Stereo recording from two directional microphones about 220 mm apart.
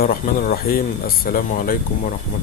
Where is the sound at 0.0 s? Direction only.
40° left (ahead or behind).